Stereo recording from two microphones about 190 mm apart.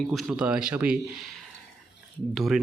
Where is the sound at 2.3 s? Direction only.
Centre (ahead or behind).